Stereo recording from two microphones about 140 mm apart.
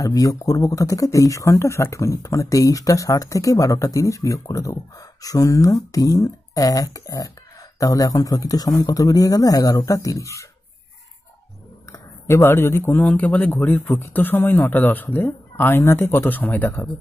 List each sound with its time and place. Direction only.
0.0 s speech: 25° left (ahead or behind)
11.9 s speech: 20° left (ahead or behind)